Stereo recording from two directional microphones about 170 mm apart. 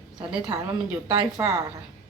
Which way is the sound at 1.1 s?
25° right (ahead or behind).